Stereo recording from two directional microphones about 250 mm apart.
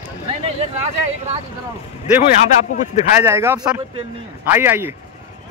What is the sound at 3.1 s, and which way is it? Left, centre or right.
A man's voice, centre.